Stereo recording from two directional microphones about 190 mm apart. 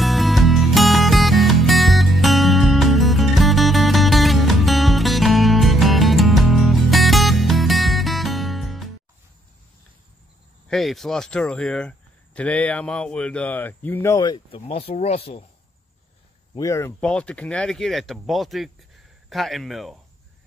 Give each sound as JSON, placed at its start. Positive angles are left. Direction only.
{"t": 0.0, "sound": "music", "side_deg": 0}
{"t": 10.7, "sound": "speech", "side_deg": 0}
{"t": 16.5, "sound": "speech", "side_deg": 15}
{"t": 17.0, "sound": "speech", "side_deg": 5}